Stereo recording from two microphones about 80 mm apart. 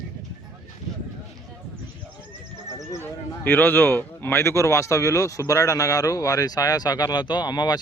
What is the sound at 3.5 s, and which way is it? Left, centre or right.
Speech, left.